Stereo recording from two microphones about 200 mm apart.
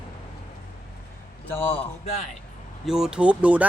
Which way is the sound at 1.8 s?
30° left (ahead or behind).